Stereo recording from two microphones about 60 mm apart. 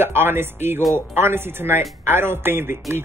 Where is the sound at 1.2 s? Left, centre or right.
Right.